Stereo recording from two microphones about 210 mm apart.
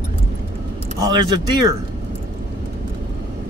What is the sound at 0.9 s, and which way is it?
Speech, 20° right (ahead or behind).